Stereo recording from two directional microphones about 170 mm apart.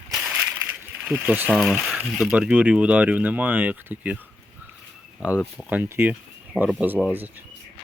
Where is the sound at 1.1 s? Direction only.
10° right (ahead or behind).